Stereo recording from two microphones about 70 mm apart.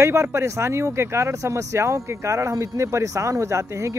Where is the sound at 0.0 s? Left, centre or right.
Right.